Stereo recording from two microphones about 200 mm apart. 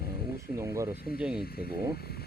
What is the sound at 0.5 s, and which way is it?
Speech, 15° right (ahead or behind).